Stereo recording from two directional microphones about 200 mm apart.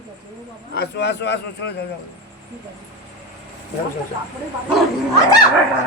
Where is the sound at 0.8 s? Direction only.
55° left (ahead or behind).